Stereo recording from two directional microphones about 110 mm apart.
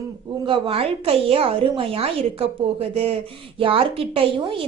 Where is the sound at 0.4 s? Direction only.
50° right (ahead or behind).